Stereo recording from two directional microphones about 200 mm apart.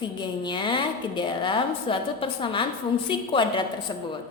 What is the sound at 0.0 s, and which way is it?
A woman's voice, 25° left (ahead or behind).